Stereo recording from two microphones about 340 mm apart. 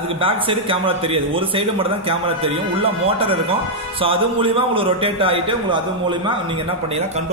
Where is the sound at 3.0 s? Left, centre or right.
Centre.